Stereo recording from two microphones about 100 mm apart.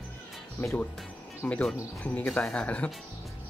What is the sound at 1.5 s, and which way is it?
Speech, 10° left (ahead or behind).